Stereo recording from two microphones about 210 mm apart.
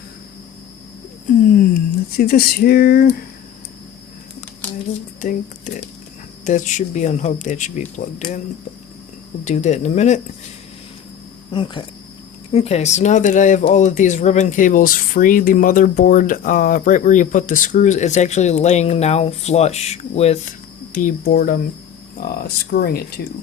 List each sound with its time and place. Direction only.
2.1 s speech: 45° left (ahead or behind)
5.2 s speech: 35° left (ahead or behind)
9.4 s speech: 35° left (ahead or behind)
11.5 s speech: 25° left (ahead or behind); by 23.2 s 45° left (ahead or behind)